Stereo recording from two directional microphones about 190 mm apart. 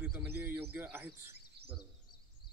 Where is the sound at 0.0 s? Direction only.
10° right (ahead or behind).